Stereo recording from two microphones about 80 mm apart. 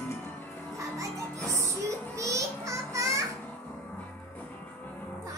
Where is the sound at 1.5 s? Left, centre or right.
Right.